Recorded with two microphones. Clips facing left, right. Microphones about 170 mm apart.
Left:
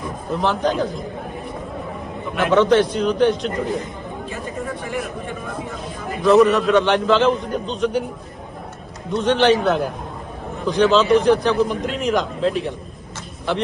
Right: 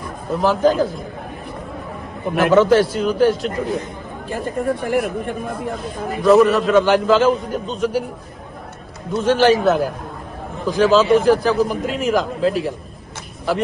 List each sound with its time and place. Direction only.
0.3 s a man's voice: centre (ahead or behind)
2.4 s a man's voice: 5° right (ahead or behind)
4.8 s speech: 60° right (ahead or behind)
6.2 s a man's voice: centre (ahead or behind)
9.1 s a man's voice: 5° right (ahead or behind)